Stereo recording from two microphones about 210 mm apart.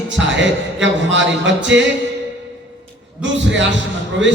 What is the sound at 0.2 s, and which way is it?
Music, 60° right (ahead or behind).